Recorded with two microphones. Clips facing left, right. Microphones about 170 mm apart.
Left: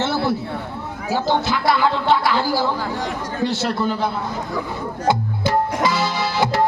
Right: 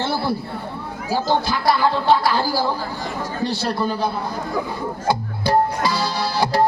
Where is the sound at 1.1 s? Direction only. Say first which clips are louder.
Even; 20° left (ahead or behind).